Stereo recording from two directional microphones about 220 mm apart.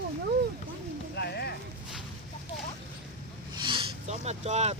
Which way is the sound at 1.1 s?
50° left (ahead or behind).